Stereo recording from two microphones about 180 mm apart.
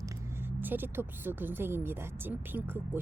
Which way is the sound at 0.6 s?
10° right (ahead or behind).